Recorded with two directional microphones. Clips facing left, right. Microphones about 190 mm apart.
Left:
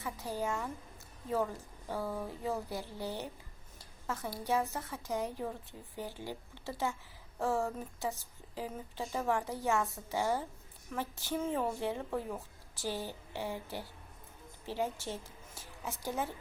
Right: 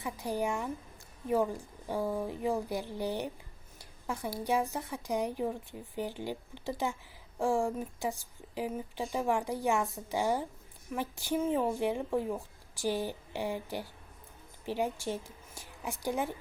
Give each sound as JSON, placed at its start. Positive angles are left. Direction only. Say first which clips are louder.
{"t": 0.0, "sound": "a woman's voice", "louder": "right 4 dB", "side_deg": -15}